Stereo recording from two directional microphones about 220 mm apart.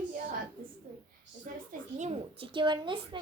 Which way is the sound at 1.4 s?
35° right (ahead or behind).